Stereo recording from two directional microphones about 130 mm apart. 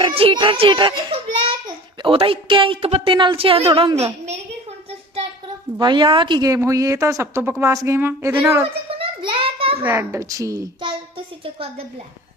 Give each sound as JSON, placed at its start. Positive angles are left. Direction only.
{"t": 0.0, "sound": "a child's voice", "side_deg": -45}
{"t": 3.9, "sound": "a woman's voice", "side_deg": -55}
{"t": 5.8, "sound": "speech", "side_deg": -40}
{"t": 9.0, "sound": "a sound", "side_deg": -40}
{"t": 9.8, "sound": "speech", "side_deg": -15}
{"t": 11.4, "sound": "a woman's voice", "side_deg": -45}